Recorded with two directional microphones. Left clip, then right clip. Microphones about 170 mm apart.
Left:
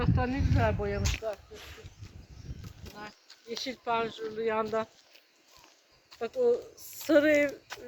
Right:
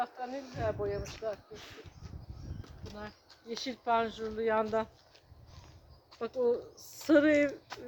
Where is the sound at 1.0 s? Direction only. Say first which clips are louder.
Left 4 dB; centre (ahead or behind).